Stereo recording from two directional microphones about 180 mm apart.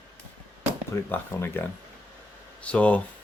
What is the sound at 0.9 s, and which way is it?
Speech, 15° left (ahead or behind).